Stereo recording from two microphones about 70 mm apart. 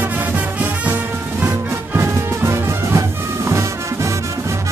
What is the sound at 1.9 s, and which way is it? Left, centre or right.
Music, right.